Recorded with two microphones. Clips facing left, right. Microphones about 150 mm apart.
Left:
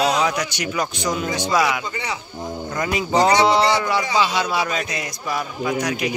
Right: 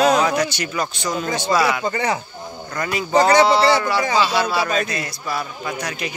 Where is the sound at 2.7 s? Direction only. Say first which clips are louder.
Right 2 dB; 20° left (ahead or behind).